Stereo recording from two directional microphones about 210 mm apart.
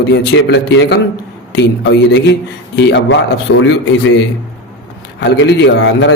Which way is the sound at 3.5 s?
90° left.